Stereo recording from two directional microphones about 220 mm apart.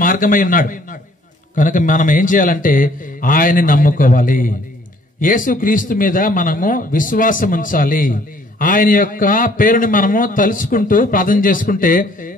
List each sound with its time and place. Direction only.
0.0 s a man's voice: 40° left (ahead or behind)